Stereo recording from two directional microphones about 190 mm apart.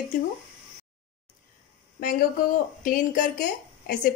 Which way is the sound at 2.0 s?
45° left (ahead or behind).